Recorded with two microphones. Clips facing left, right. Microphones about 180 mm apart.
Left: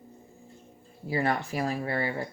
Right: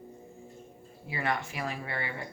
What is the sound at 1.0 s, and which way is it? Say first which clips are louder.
Speech: left 5 dB; 35° left (ahead or behind).